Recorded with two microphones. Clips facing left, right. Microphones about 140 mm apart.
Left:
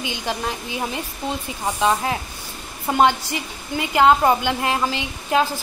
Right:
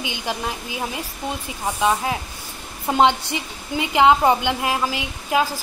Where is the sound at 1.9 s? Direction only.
5° right (ahead or behind).